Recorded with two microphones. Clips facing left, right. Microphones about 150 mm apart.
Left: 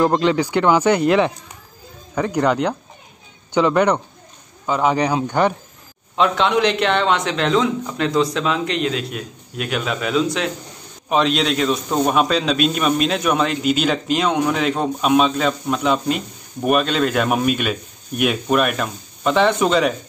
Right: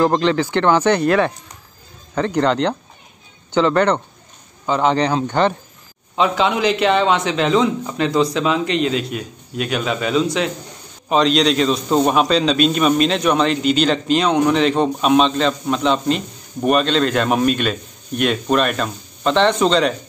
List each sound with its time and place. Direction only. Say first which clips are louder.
0.0 s a man's voice: even; 10° left (ahead or behind)
6.1 s a man's voice: even; centre (ahead or behind)